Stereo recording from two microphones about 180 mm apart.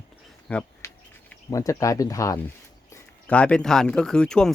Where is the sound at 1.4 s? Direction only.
20° left (ahead or behind).